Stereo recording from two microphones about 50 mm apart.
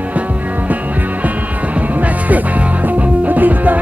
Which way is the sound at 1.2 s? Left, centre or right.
Right.